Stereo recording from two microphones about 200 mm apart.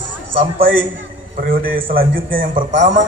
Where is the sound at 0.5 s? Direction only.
45° right (ahead or behind).